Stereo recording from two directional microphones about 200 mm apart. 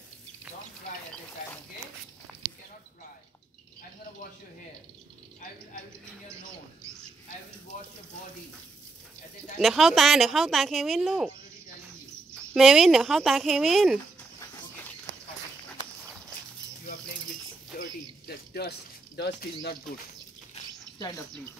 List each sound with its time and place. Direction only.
9.6 s speech: centre (ahead or behind)
12.5 s speech: centre (ahead or behind)
17.7 s a sound: 50° left (ahead or behind)
21.0 s speech: 15° left (ahead or behind)